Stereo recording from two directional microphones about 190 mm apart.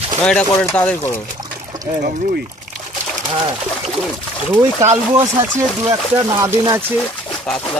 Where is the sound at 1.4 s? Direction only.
20° right (ahead or behind).